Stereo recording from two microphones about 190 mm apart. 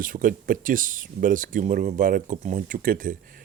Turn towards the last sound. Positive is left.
turn(degrees=-45)  # may be behind; listen again after turning